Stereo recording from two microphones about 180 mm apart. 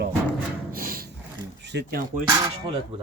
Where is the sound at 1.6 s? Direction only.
70° right (ahead or behind).